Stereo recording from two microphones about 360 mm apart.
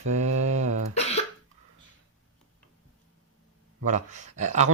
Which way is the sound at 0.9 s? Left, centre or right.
Centre.